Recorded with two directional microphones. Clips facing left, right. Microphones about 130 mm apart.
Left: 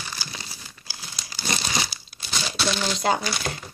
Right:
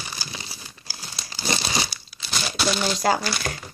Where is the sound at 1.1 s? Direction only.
25° right (ahead or behind).